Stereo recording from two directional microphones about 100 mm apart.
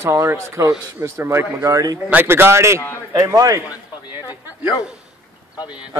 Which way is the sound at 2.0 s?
20° right (ahead or behind).